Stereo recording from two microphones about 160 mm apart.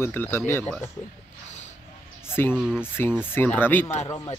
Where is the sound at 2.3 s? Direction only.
15° left (ahead or behind).